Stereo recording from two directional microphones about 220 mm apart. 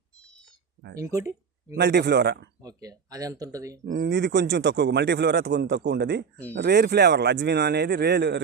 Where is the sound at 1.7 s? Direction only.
50° right (ahead or behind).